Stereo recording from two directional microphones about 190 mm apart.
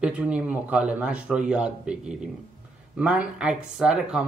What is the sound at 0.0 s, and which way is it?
Speech, 5° right (ahead or behind).